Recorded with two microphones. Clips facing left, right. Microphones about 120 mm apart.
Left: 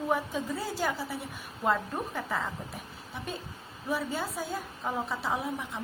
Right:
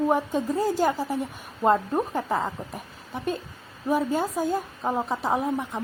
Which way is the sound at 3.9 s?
45° right (ahead or behind).